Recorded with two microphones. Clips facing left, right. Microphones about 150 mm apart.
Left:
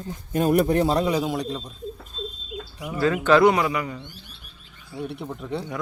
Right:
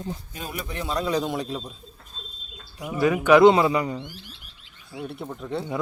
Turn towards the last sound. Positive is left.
turn(degrees=0)  # may be behind; listen again after turning